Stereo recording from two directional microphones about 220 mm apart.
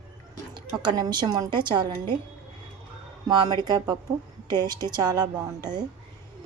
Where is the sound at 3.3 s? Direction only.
20° right (ahead or behind).